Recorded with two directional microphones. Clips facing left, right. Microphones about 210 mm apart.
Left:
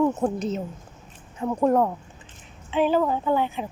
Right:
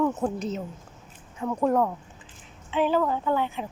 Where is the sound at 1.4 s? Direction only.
30° left (ahead or behind).